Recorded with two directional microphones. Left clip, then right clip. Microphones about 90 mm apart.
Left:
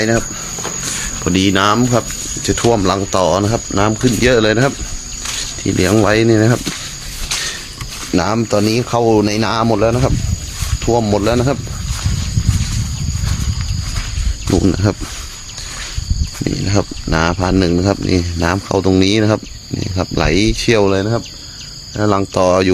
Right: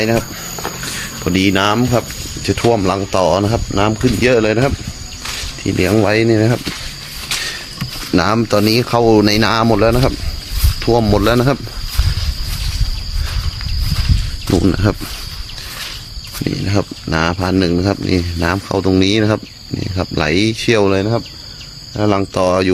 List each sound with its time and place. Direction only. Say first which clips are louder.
0.9 s cricket: left 2 dB; 30° left (ahead or behind)
1.2 s speech: left 1 dB; 15° left (ahead or behind)
3.1 s speech: right 2 dB; 10° left (ahead or behind)
5.2 s cricket: left 1 dB; 5° left (ahead or behind)
6.1 s speech: left 1 dB; 20° left (ahead or behind)
8.1 s speech: right 1 dB; 20° right (ahead or behind)
8.8 s speech: right 2 dB; 40° right (ahead or behind)
14.4 s a sound: even; 25° right (ahead or behind)
14.7 s speech: even; centre (ahead or behind)
16.4 s speech: left 1 dB; 15° left (ahead or behind)
20.8 s speech: even; 5° left (ahead or behind)
21.9 s speech: even; 15° left (ahead or behind)
22.4 s speech: left 3 dB; 35° left (ahead or behind)